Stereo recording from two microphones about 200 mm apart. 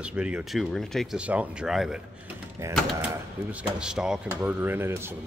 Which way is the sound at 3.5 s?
5° right (ahead or behind).